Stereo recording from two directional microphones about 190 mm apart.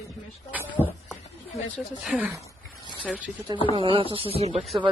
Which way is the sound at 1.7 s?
5° right (ahead or behind).